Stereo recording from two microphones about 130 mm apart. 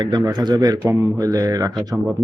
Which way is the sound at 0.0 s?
30° right (ahead or behind).